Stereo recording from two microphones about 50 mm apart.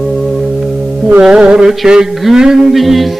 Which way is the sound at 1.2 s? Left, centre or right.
Centre.